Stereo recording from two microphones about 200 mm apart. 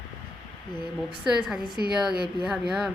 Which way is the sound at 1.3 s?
5° right (ahead or behind).